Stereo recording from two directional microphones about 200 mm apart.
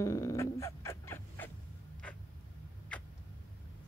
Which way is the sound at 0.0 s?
15° left (ahead or behind).